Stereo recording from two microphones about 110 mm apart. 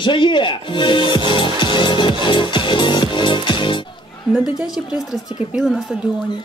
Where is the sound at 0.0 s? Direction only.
45° left (ahead or behind).